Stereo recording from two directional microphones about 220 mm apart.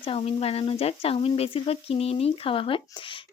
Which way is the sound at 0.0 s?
25° left (ahead or behind).